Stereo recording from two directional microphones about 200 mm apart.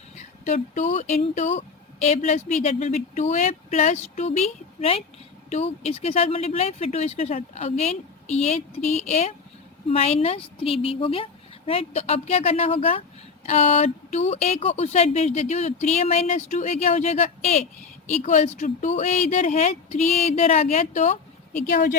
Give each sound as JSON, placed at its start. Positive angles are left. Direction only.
{"t": 0.2, "sound": "a woman's voice", "side_deg": 35}